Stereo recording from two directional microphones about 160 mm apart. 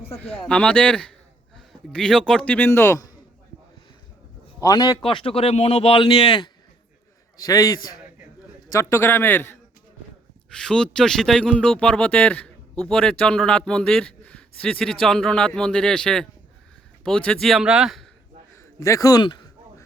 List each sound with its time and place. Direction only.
0.2 s a man's voice: 10° left (ahead or behind)
4.6 s a man's voice: 25° left (ahead or behind)
7.3 s a man's voice: 20° left (ahead or behind); by 18.1 s centre (ahead or behind)
18.5 s speech: 15° left (ahead or behind)